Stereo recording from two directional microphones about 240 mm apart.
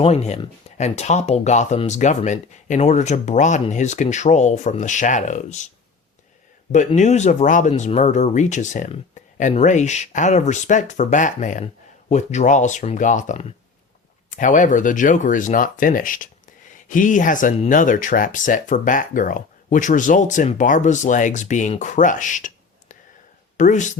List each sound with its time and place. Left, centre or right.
0.0 s speech: left